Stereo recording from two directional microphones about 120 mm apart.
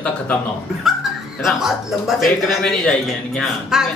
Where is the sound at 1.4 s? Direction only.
Centre (ahead or behind).